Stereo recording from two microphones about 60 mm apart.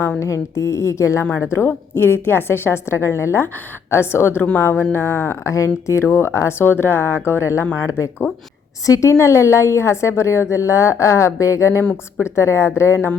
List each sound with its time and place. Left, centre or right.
0.3 s a woman's voice: left
1.5 s a woman's voice: left
5.5 s a woman's voice: left
8.9 s a woman's voice: left
11.8 s a woman's voice: left
12.2 s a woman's voice: left